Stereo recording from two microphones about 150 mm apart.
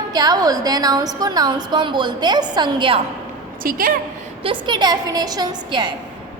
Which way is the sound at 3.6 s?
70° right (ahead or behind).